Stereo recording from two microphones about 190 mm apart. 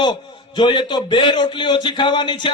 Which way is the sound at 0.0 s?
25° left (ahead or behind).